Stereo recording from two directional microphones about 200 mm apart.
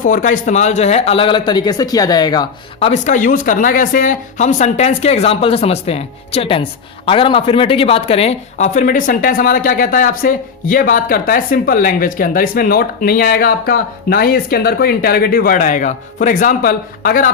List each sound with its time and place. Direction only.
0.0 s speech: 40° left (ahead or behind); by 2.9 s 20° left (ahead or behind)
2.9 s speech: 40° left (ahead or behind)